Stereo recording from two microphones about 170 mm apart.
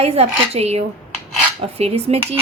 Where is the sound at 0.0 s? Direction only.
35° right (ahead or behind).